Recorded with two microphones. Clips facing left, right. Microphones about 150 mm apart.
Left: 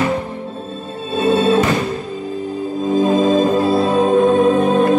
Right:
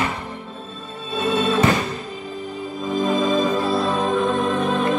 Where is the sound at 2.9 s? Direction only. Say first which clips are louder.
Left 6 dB; 45° left (ahead or behind).